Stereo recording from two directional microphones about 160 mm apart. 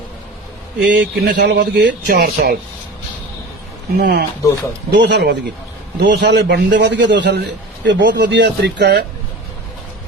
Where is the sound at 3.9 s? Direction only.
80° right.